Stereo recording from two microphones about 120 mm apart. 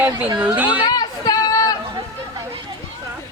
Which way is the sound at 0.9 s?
35° left (ahead or behind).